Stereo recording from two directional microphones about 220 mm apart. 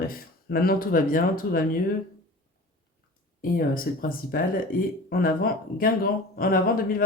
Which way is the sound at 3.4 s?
40° left (ahead or behind).